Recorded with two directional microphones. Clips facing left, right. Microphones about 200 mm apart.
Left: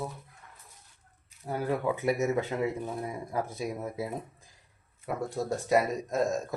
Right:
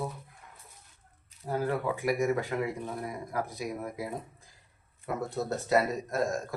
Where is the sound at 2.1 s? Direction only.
25° left (ahead or behind).